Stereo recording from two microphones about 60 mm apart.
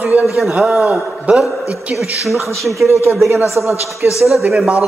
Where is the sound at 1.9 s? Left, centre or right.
Centre.